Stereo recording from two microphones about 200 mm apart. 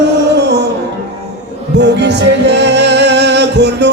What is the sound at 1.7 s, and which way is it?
Music, 60° right (ahead or behind).